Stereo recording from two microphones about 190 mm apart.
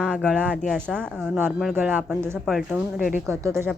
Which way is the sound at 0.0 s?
5° right (ahead or behind).